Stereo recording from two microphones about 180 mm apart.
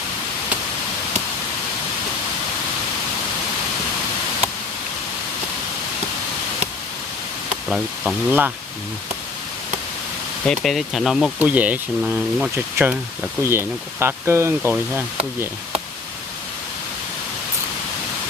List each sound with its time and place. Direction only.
7.7 s speech: 5° right (ahead or behind)
10.4 s speech: 5° left (ahead or behind)